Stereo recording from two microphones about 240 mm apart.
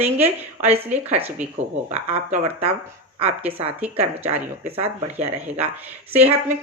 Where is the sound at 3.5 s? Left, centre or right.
Right.